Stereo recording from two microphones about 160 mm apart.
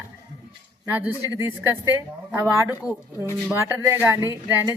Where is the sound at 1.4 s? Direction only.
15° right (ahead or behind).